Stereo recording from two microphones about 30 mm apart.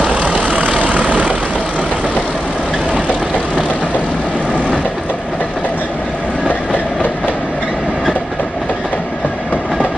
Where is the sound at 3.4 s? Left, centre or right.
Right.